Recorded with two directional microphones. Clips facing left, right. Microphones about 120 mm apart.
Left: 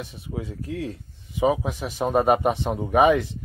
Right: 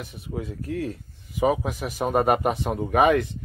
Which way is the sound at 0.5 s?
25° left (ahead or behind).